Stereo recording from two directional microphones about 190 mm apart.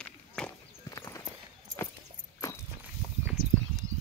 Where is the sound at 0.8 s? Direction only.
15° left (ahead or behind).